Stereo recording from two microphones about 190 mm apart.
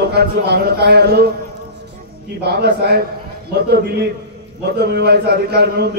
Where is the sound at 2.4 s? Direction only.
55° right (ahead or behind).